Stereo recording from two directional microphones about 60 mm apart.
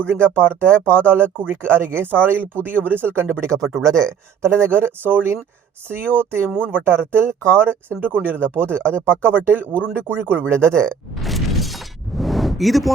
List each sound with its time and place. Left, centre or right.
0.1 s speech: right
3.4 s speech: right
4.4 s speech: right
10.5 s speech: right
11.1 s shatter: centre